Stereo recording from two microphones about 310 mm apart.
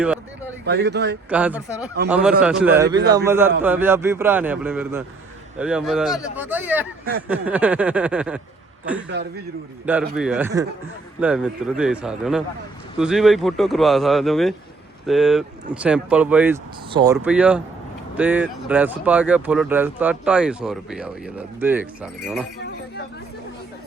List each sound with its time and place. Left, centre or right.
0.6 s speech: right
1.3 s a man's voice: centre
9.1 s speech: right
10.2 s speech: centre